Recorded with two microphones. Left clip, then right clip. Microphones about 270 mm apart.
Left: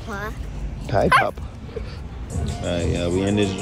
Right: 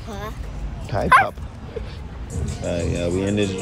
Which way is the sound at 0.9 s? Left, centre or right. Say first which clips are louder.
Left 5 dB; left.